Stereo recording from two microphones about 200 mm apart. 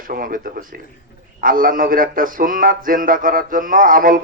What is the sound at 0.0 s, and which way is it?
A man's voice, 45° right (ahead or behind).